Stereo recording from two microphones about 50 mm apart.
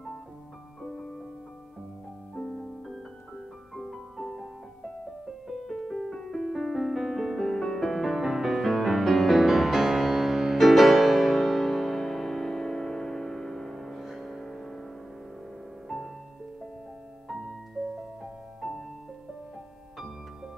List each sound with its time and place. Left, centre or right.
0.8 s music: centre
2.3 s music: centre
3.7 s music: centre
5.5 s music: centre
7.9 s music: centre
15.9 s music: centre
17.9 s music: centre